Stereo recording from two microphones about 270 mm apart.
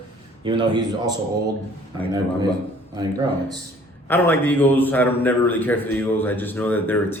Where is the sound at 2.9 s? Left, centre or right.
Centre.